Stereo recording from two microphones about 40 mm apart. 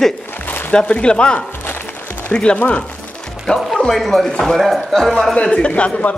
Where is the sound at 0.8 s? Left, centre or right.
Left.